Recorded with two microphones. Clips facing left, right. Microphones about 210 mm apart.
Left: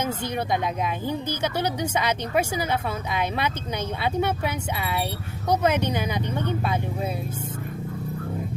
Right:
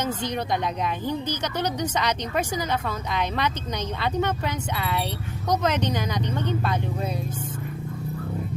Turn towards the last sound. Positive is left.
turn(degrees=5)  # may be behind; listen again after turning